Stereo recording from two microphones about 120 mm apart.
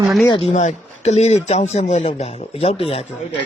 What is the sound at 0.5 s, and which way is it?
A man's voice, 70° left (ahead or behind).